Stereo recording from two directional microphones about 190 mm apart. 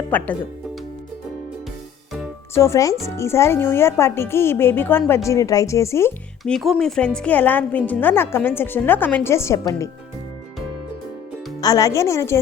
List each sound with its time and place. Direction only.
0.1 s a woman's voice: 10° left (ahead or behind)
2.6 s a woman's voice: 15° left (ahead or behind)
6.4 s a woman's voice: centre (ahead or behind); by 9.9 s 15° left (ahead or behind)
11.6 s a woman's voice: 15° left (ahead or behind)